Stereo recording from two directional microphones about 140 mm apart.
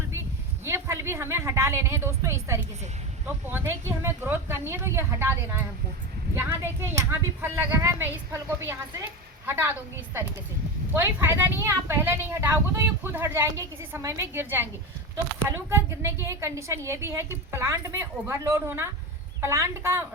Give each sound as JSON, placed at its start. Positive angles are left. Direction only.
{"t": 0.6, "sound": "a woman's voice", "side_deg": -20}
{"t": 10.9, "sound": "a woman's voice", "side_deg": -15}